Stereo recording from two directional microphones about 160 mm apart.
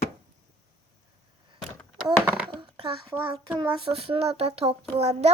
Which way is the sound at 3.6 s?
35° right (ahead or behind).